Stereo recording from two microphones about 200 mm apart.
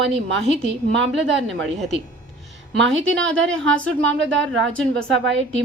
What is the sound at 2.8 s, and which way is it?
Speech, 70° right (ahead or behind).